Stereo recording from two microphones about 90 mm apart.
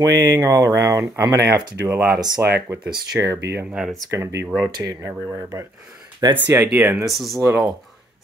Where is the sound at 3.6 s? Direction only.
10° right (ahead or behind).